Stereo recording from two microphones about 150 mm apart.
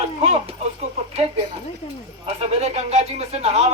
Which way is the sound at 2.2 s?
45° right (ahead or behind).